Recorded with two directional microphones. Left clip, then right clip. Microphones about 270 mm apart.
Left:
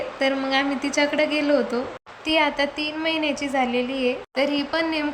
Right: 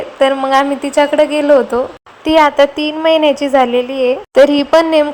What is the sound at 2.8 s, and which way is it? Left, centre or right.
A woman's voice, centre.